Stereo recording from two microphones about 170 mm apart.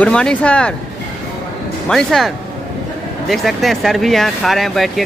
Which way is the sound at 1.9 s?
5° left (ahead or behind).